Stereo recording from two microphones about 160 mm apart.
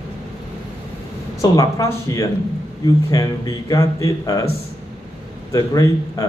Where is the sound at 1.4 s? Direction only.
20° left (ahead or behind).